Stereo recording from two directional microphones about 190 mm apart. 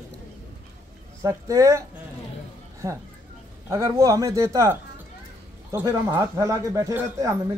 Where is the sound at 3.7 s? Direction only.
15° right (ahead or behind).